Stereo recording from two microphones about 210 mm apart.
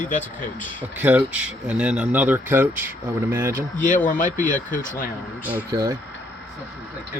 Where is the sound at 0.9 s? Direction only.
5° right (ahead or behind).